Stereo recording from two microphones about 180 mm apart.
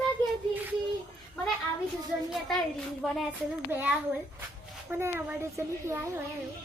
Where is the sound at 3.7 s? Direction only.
10° right (ahead or behind).